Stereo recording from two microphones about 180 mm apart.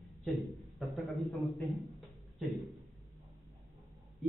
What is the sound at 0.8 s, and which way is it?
A man's voice, centre (ahead or behind).